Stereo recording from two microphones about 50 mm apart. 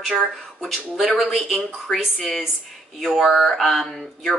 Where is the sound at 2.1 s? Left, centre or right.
Centre.